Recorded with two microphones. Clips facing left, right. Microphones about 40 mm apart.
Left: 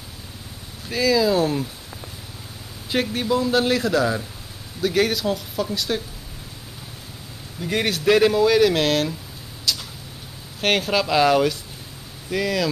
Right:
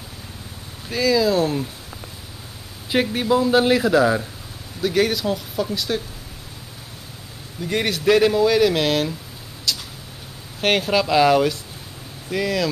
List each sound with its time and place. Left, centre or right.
0.8 s speech: centre
2.9 s a man's voice: centre
4.8 s speech: centre
7.6 s speech: centre
9.7 s a sound: centre
10.6 s speech: centre